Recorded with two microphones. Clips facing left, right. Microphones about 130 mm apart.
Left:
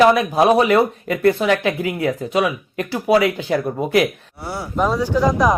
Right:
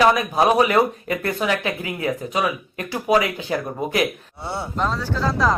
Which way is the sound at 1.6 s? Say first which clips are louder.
Left 5 dB; 50° left (ahead or behind).